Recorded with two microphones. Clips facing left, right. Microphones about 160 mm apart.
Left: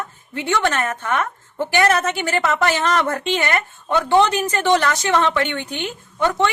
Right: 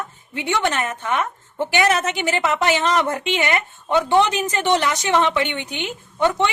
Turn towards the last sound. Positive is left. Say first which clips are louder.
# even
turn(degrees=-20)  # may be behind; listen again after turning